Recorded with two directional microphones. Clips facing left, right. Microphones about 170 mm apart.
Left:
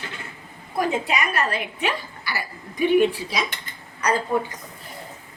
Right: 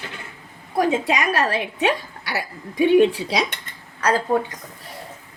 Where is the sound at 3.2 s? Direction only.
75° right (ahead or behind).